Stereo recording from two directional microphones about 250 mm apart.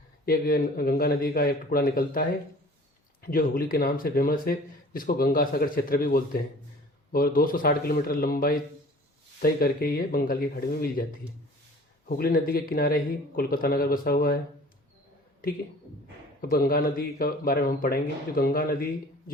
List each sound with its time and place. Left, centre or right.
0.3 s speech: left
12.0 s speech: left
16.4 s speech: left